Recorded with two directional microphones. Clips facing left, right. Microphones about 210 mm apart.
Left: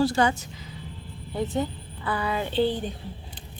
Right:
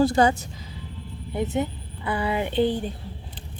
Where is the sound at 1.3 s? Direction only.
20° right (ahead or behind).